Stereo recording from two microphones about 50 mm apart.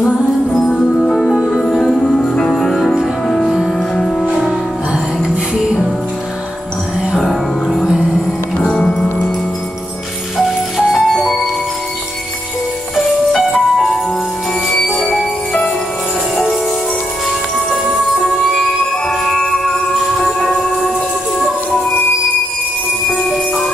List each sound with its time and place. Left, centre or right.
0.5 s music: centre
4.3 s music: centre
7.2 s music: centre
7.8 s music: centre
8.5 s music: centre
10.3 s music: centre
14.7 s music: centre
17.8 s music: centre
19.0 s music: centre
23.0 s jingle bell: centre